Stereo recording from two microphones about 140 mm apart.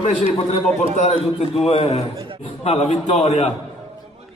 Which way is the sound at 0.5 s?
50° left (ahead or behind).